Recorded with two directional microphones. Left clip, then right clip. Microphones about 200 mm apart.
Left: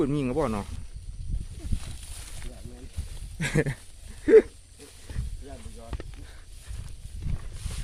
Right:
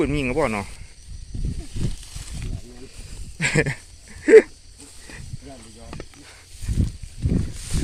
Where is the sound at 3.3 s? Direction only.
10° left (ahead or behind).